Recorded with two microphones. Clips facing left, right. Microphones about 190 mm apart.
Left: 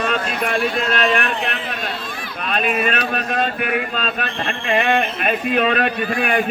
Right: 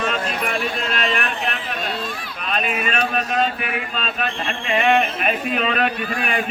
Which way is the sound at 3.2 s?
45° left (ahead or behind).